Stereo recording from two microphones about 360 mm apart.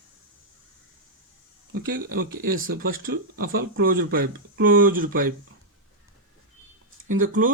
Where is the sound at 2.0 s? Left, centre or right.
Right.